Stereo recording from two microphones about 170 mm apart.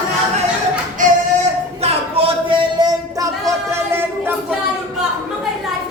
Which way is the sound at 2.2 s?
35° right (ahead or behind).